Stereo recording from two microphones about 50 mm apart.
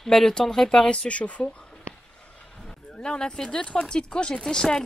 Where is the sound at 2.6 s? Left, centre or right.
Centre.